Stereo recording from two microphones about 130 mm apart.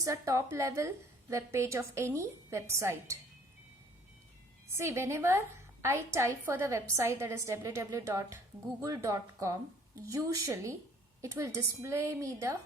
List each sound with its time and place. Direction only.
0.0 s a woman's voice: 25° right (ahead or behind)
4.8 s a woman's voice: 20° right (ahead or behind)